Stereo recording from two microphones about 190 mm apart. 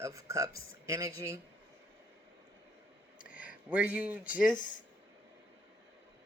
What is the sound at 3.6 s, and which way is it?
Speech, 5° right (ahead or behind).